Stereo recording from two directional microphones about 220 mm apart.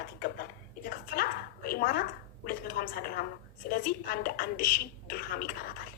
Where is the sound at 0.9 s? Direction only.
45° left (ahead or behind).